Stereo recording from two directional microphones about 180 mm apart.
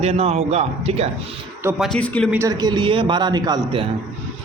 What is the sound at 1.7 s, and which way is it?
Speech, centre (ahead or behind).